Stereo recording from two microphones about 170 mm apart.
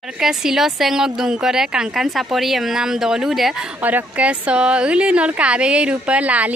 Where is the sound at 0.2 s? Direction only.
5° right (ahead or behind).